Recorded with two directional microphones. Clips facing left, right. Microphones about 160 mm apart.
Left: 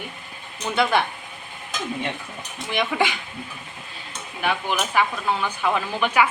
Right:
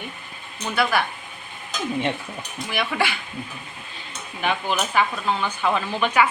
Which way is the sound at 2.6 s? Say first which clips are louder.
Left 2 dB; 20° left (ahead or behind).